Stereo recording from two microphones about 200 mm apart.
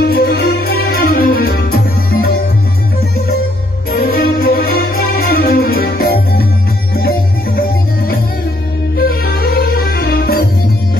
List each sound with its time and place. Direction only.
0.1 s music: 50° left (ahead or behind)
3.9 s music: 45° left (ahead or behind)